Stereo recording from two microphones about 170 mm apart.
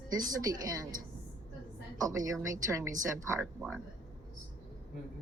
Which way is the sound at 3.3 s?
5° left (ahead or behind).